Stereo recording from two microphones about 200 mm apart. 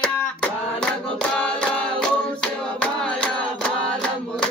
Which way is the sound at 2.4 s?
5° left (ahead or behind).